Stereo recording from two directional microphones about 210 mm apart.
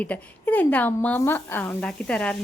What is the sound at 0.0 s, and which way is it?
Speech, 5° left (ahead or behind).